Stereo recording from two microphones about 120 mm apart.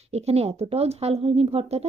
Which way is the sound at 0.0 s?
60° right (ahead or behind).